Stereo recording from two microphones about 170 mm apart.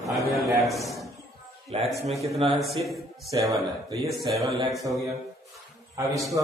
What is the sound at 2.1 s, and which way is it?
A man's voice, centre (ahead or behind).